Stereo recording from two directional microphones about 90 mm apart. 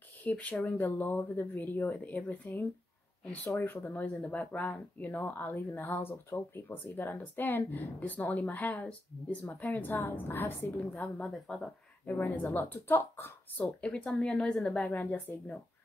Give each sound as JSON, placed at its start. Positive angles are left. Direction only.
{"t": 0.2, "sound": "a woman's voice", "side_deg": 15}
{"t": 11.2, "sound": "a woman's voice", "side_deg": 10}
{"t": 12.1, "sound": "speech", "side_deg": 20}
{"t": 13.7, "sound": "a woman's voice", "side_deg": 15}